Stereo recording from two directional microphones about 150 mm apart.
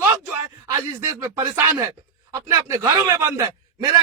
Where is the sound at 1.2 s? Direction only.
20° right (ahead or behind).